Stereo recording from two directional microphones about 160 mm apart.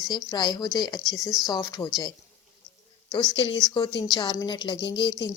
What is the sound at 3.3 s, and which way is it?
Speech, 30° left (ahead or behind).